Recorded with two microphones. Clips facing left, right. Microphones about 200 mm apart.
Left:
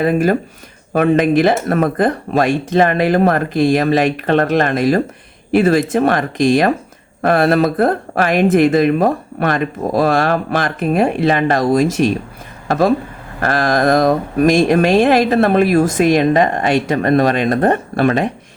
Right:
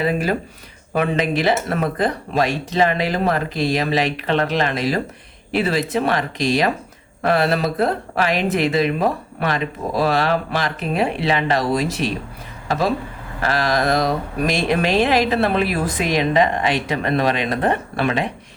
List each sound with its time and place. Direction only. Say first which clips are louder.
0.0 s speech: left 6 dB; 50° left (ahead or behind)